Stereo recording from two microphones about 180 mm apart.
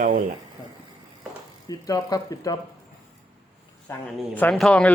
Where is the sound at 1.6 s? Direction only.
20° left (ahead or behind).